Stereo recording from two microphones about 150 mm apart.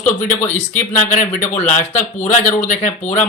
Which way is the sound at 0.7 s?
55° left (ahead or behind).